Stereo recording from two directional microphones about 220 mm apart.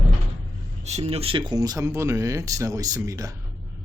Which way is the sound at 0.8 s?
30° right (ahead or behind).